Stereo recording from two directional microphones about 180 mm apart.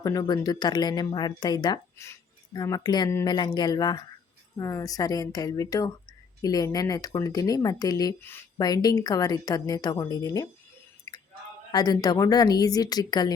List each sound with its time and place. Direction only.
0.0 s speech: 20° left (ahead or behind)
11.1 s chewing: 20° left (ahead or behind)
11.7 s speech: 20° left (ahead or behind)